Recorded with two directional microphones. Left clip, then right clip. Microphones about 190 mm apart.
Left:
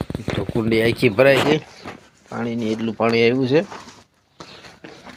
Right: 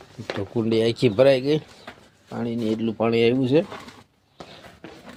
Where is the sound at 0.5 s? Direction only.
5° left (ahead or behind).